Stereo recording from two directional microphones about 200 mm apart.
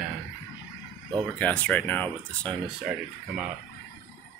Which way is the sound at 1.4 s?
5° left (ahead or behind).